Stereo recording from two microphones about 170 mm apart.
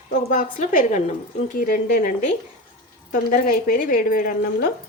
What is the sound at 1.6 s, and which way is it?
A woman's voice, 60° left (ahead or behind).